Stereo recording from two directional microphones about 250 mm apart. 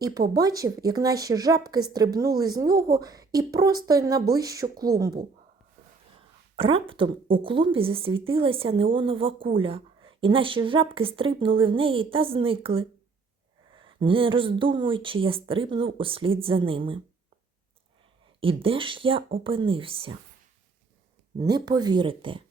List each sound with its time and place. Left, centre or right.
0.3 s speech: centre
6.6 s a woman's voice: right
18.3 s a woman's voice: right
21.3 s speech: centre